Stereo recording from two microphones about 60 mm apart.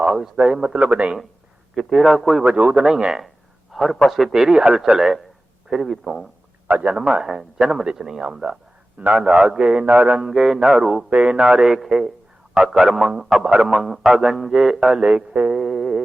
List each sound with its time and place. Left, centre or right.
0.0 s a man's voice: centre
1.7 s a man's voice: centre
2.4 s a man's voice: right
3.7 s a sound: centre
4.0 s a man's voice: centre
6.8 s a man's voice: centre
9.0 s a man's voice: right
9.2 s a man's voice: centre
9.6 s a man's voice: centre
10.1 s a man's voice: centre
11.1 s a man's voice: right
11.4 s a man's voice: centre